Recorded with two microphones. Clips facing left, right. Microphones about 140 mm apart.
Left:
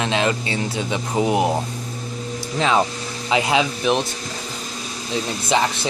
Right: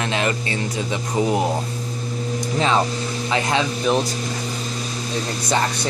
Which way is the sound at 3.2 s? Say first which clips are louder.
Left 3 dB; 15° left (ahead or behind).